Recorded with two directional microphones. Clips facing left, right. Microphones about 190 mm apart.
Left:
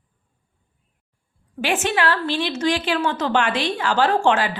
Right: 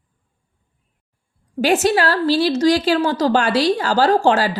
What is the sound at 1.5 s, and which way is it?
A woman's voice, 40° right (ahead or behind).